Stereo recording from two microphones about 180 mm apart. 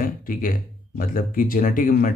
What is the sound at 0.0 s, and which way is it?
Speech, 50° left (ahead or behind).